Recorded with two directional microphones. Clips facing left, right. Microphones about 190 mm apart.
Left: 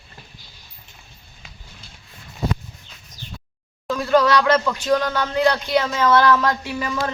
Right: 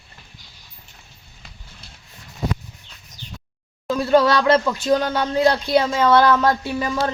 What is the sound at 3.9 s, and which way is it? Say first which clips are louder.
Speech: right 1 dB; 25° right (ahead or behind).